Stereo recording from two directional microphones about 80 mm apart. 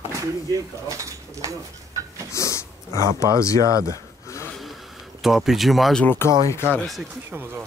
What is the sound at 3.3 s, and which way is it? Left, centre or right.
Speech, left.